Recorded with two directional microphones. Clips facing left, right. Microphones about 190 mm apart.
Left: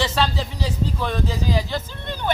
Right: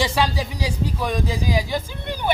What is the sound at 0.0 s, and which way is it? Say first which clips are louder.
Speech: right 1 dB; 10° right (ahead or behind).